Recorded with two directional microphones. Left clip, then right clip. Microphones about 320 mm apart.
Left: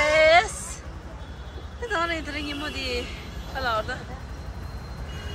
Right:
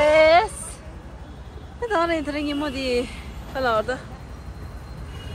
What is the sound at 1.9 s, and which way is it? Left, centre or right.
Speech, centre.